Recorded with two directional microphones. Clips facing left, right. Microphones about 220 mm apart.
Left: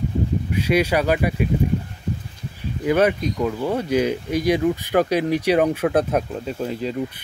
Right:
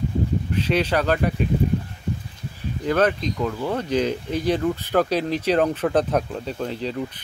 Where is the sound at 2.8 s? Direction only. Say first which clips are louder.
Left 2 dB; 10° left (ahead or behind).